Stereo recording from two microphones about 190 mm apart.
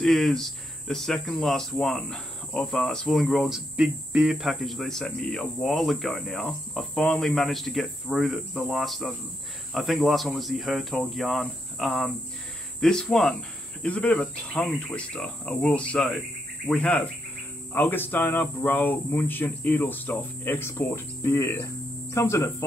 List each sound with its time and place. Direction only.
0.0 s speech: centre (ahead or behind)